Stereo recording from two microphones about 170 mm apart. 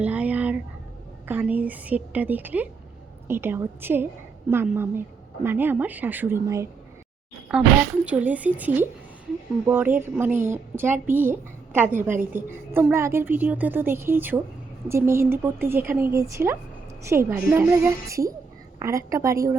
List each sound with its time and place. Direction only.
0.0 s a sound: 10° right (ahead or behind)
1.3 s a woman's voice: 10° right (ahead or behind)
7.5 s a woman's voice: 5° right (ahead or behind)